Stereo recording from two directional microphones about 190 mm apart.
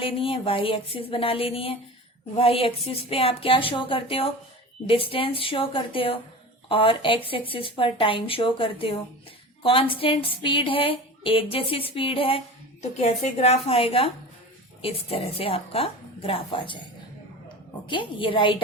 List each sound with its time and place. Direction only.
0.0 s a woman's voice: 30° left (ahead or behind)
17.8 s a woman's voice: 25° left (ahead or behind)